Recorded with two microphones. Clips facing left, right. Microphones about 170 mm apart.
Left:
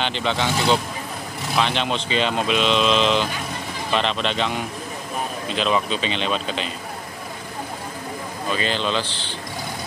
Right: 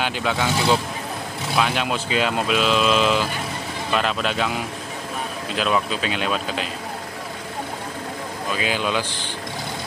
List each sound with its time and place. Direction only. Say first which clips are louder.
0.0 s speech: even; 5° right (ahead or behind)
8.5 s speech: even; 10° right (ahead or behind)